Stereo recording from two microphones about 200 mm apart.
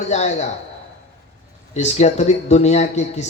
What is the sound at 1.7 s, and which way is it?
A man's voice, 35° left (ahead or behind).